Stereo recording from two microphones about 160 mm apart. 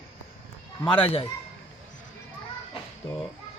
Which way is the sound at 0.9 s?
35° left (ahead or behind).